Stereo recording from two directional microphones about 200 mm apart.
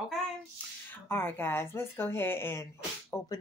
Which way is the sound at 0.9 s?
10° left (ahead or behind).